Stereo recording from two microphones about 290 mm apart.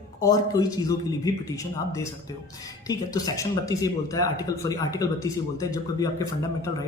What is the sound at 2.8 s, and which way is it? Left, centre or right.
A man's voice, centre.